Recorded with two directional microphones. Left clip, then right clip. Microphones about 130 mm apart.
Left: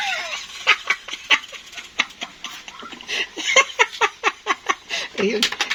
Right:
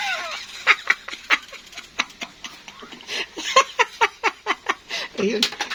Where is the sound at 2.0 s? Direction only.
15° left (ahead or behind).